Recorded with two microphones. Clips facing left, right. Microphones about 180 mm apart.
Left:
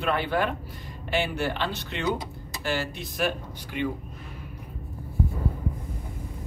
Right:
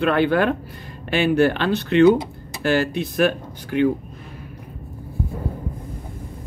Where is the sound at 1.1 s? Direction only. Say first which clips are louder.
Right 10 dB; 65° right (ahead or behind).